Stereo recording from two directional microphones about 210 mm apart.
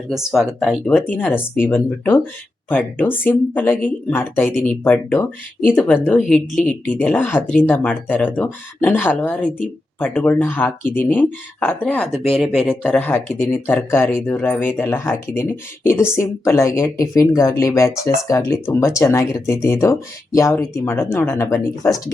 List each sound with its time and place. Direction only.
0.1 s speech: centre (ahead or behind)